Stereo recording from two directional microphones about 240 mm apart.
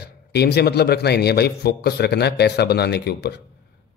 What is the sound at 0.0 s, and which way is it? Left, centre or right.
A man's voice, left.